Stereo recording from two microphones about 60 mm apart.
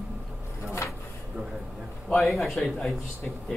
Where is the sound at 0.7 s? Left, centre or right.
Left.